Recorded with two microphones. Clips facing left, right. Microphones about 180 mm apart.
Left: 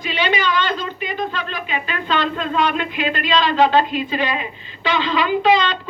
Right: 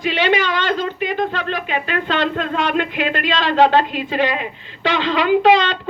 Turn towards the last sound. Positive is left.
turn(degrees=-70)  # may be behind; listen again after turning